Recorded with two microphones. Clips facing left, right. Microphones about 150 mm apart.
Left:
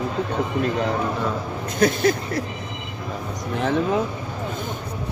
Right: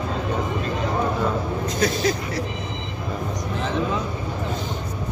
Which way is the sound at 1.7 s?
55° left (ahead or behind).